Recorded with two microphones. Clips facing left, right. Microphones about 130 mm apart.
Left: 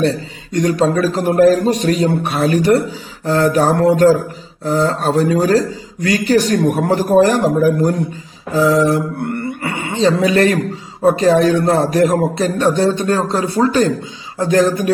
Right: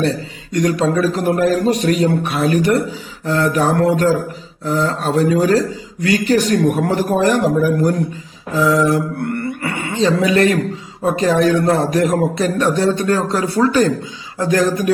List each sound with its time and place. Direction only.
0.5 s a man's voice: 30° left (ahead or behind)